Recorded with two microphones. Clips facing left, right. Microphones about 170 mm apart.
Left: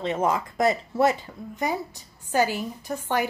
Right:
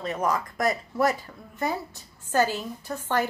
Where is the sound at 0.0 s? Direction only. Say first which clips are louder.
Left 2 dB; 25° left (ahead or behind).